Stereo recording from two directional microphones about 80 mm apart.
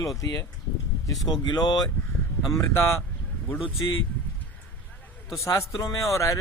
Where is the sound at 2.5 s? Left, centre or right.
Left.